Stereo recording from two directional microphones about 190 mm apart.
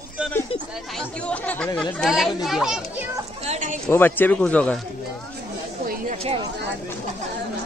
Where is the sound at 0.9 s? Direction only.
5° left (ahead or behind).